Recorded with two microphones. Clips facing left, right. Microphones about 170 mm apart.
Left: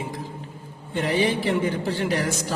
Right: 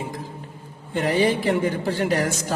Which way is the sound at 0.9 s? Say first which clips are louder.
Right 2 dB; 45° right (ahead or behind).